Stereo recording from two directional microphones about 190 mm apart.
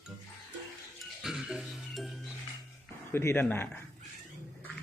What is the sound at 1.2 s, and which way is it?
Music, centre (ahead or behind).